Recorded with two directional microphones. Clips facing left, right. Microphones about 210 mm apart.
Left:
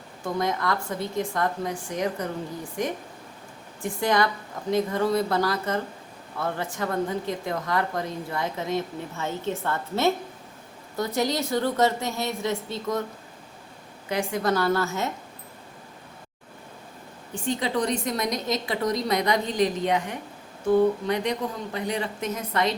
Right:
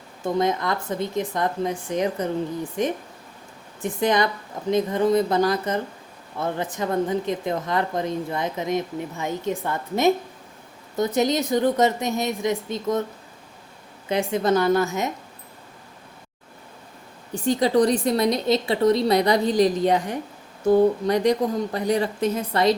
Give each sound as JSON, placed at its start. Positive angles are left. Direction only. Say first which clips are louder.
{"t": 0.3, "sound": "a woman's voice", "louder": "right 4 dB", "side_deg": -20}
{"t": 14.1, "sound": "a woman's voice", "louder": "right 4 dB", "side_deg": -20}
{"t": 17.3, "sound": "a woman's voice", "louder": "right 7 dB", "side_deg": -40}